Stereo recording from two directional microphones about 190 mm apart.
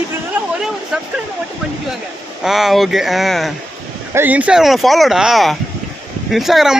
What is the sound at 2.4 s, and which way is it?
Speech, centre (ahead or behind).